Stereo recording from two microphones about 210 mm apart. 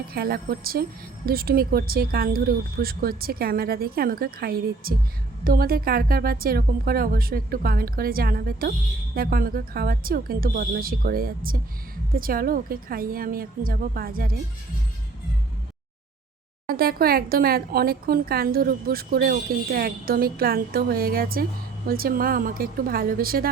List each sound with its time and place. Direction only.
0.1 s speech: 45° right (ahead or behind)
16.6 s speech: 45° right (ahead or behind)